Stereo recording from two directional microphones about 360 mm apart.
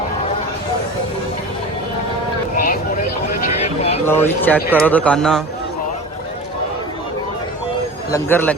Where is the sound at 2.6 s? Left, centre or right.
Left.